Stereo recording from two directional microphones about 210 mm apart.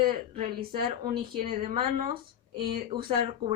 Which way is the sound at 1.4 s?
30° right (ahead or behind).